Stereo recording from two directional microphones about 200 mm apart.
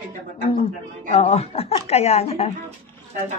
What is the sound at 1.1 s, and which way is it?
Speech, 30° left (ahead or behind).